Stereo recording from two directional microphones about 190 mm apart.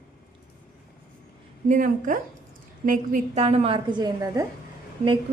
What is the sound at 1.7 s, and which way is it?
A woman's voice, 45° right (ahead or behind).